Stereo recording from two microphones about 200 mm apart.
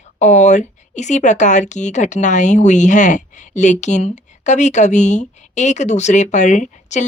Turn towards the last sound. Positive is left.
turn(degrees=35)  # may be behind; listen again after turning